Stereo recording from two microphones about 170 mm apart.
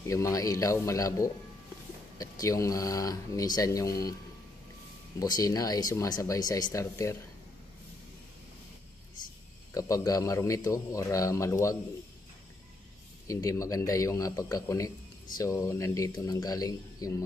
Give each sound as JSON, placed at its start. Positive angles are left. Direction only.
{"t": 0.0, "sound": "a man's voice", "side_deg": 20}
{"t": 5.2, "sound": "a man's voice", "side_deg": 20}
{"t": 9.8, "sound": "a man's voice", "side_deg": 20}
{"t": 13.3, "sound": "a man's voice", "side_deg": 20}